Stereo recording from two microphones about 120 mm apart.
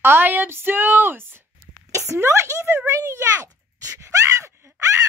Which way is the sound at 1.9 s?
25° right (ahead or behind).